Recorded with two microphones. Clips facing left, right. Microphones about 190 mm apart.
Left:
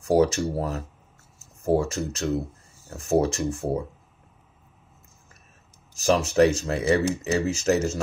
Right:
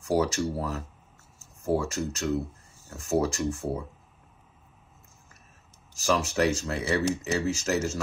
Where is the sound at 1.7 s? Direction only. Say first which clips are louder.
Left 4 dB; 25° left (ahead or behind).